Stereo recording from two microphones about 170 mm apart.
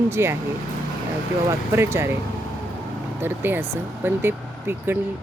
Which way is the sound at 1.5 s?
15° right (ahead or behind).